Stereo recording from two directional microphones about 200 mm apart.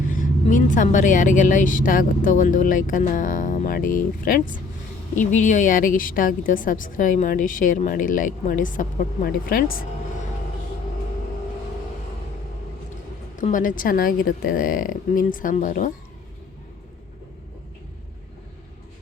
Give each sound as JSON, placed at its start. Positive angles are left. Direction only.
{"t": 0.1, "sound": "a woman's voice", "side_deg": 40}
{"t": 13.4, "sound": "a woman's voice", "side_deg": 40}